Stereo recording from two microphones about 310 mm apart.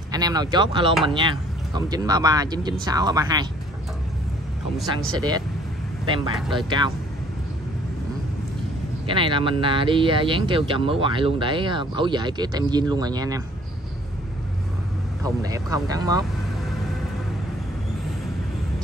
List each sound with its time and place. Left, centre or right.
0.1 s speech: centre
6.0 s speech: centre
9.0 s speech: centre
15.2 s speech: centre